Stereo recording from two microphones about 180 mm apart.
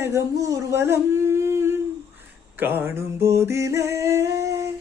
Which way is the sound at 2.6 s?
10° right (ahead or behind).